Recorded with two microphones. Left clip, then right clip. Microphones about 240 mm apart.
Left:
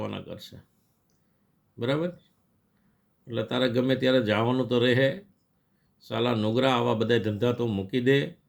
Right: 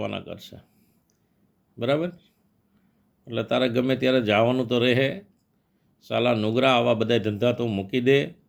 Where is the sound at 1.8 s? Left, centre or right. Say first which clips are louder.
Right 4 dB; centre.